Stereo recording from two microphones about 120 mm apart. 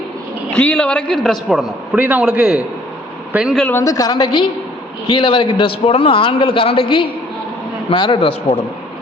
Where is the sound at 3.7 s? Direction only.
25° left (ahead or behind).